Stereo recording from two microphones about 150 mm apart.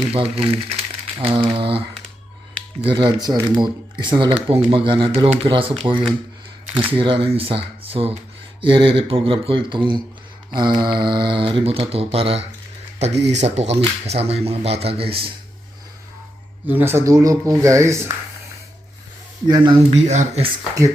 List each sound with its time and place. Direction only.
0.1 s speech: 40° right (ahead or behind)
2.8 s speech: 35° right (ahead or behind)
16.6 s speech: 15° right (ahead or behind)
19.5 s speech: 25° right (ahead or behind)
19.9 s speech: 50° right (ahead or behind)